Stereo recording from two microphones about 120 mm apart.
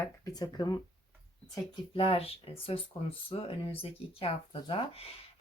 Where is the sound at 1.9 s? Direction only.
50° left (ahead or behind).